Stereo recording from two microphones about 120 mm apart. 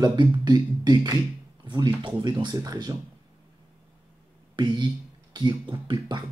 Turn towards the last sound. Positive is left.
turn(degrees=-40)  # may be behind; listen again after turning